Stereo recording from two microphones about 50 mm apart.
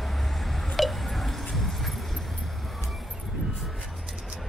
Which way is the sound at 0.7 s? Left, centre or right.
Centre.